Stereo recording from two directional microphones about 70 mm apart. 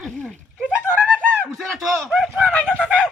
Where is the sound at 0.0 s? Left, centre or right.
Centre.